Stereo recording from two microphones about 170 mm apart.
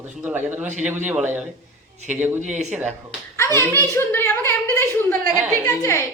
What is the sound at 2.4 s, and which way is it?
Speech, 45° right (ahead or behind).